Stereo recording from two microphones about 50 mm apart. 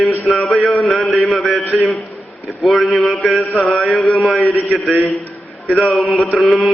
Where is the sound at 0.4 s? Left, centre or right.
Centre.